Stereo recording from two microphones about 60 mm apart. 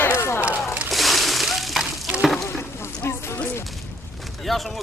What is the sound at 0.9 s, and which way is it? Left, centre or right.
Splash, centre.